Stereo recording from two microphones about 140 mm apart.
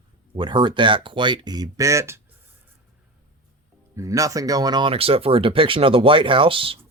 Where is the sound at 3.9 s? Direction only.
25° right (ahead or behind).